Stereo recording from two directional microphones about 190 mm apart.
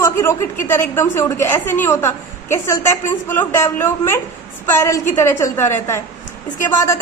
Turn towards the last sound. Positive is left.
turn(degrees=15)  # may be behind; listen again after turning